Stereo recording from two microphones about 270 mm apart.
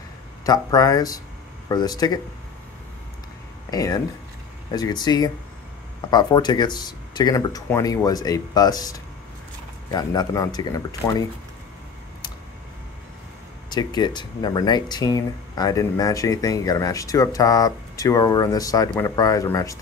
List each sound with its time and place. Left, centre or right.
0.5 s speech: centre
3.7 s speech: centre
13.7 s speech: centre